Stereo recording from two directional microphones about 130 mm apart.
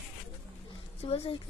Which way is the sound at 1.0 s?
50° left (ahead or behind).